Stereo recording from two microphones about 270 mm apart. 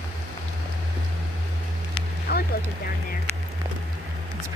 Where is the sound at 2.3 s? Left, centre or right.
Left.